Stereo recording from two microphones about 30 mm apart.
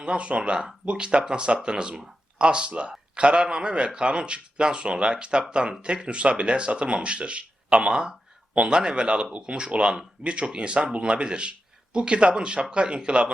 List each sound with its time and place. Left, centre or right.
0.0 s speech: right